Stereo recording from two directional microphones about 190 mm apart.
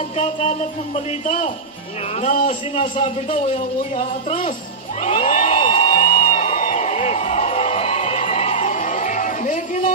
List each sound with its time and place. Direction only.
0.2 s a man's voice: 35° left (ahead or behind)
3.9 s speech: 45° left (ahead or behind)
5.0 s music: 40° left (ahead or behind)